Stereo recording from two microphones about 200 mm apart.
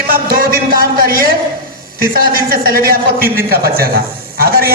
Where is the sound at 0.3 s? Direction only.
50° right (ahead or behind).